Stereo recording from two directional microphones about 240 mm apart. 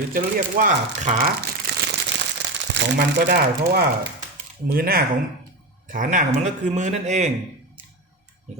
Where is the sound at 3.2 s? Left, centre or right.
Right.